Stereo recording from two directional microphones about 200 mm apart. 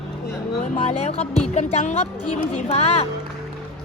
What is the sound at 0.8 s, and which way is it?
Speech, 30° left (ahead or behind).